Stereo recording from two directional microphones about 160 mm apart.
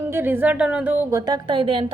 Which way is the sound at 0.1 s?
10° right (ahead or behind).